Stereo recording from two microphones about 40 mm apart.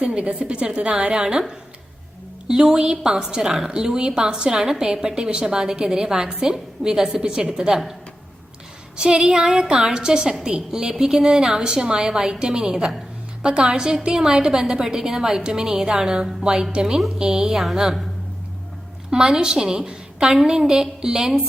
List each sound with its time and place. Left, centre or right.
0.0 s a woman's voice: right
9.0 s a woman's voice: right; by 16.3 s centre
16.4 s a woman's voice: right
17.6 s a woman's voice: centre
19.1 s a woman's voice: centre